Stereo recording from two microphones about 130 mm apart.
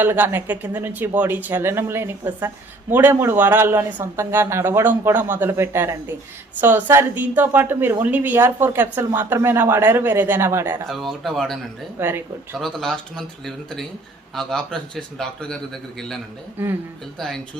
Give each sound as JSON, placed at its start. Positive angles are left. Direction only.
{"t": 0.0, "sound": "a woman's voice", "side_deg": -15}
{"t": 10.8, "sound": "speech", "side_deg": 0}
{"t": 11.9, "sound": "a woman's voice", "side_deg": -20}
{"t": 12.5, "sound": "speech", "side_deg": 5}
{"t": 16.6, "sound": "a woman's voice", "side_deg": -15}
{"t": 17.2, "sound": "speech", "side_deg": 5}